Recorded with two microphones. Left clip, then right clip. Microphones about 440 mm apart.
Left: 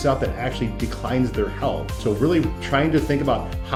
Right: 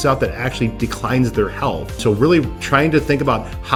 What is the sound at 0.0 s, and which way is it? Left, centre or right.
Speech, right.